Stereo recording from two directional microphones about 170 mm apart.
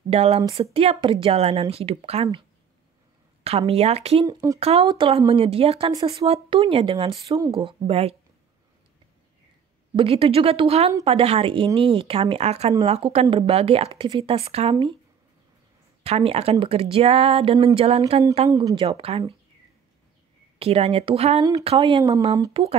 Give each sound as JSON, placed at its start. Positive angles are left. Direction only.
{"t": 0.1, "sound": "speech", "side_deg": -35}
{"t": 0.4, "sound": "speech", "side_deg": -20}
{"t": 0.7, "sound": "speech", "side_deg": -35}
{"t": 3.4, "sound": "speech", "side_deg": -35}
{"t": 4.3, "sound": "speech", "side_deg": -20}
{"t": 4.6, "sound": "speech", "side_deg": -35}
{"t": 9.9, "sound": "speech", "side_deg": -30}
{"t": 16.0, "sound": "speech", "side_deg": -35}
{"t": 18.5, "sound": "speech", "side_deg": -20}
{"t": 18.9, "sound": "speech", "side_deg": -35}
{"t": 20.5, "sound": "speech", "side_deg": -35}
{"t": 22.5, "sound": "speech", "side_deg": -35}